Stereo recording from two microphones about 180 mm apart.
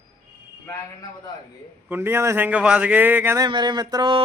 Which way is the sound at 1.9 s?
15° right (ahead or behind).